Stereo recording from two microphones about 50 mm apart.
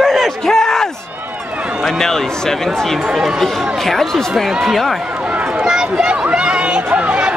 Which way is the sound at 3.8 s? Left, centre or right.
Centre.